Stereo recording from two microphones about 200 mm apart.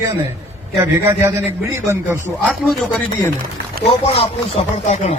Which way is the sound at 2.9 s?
10° left (ahead or behind).